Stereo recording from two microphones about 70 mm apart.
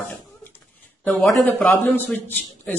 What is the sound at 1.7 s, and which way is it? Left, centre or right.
Speech, left.